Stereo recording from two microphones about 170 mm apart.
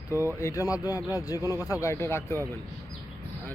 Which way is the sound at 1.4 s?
15° right (ahead or behind).